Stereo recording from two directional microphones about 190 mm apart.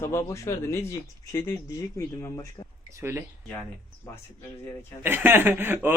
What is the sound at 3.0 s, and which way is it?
Speech, 10° right (ahead or behind).